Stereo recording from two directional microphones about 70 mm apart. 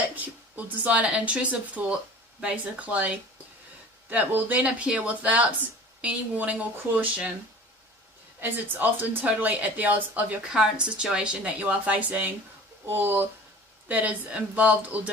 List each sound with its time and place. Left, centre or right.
0.2 s speech: right
4.1 s speech: right
8.4 s speech: right
10.5 s a woman's voice: centre
12.8 s speech: right